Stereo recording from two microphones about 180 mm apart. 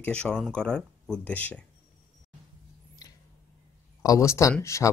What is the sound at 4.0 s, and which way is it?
Speech, 15° left (ahead or behind).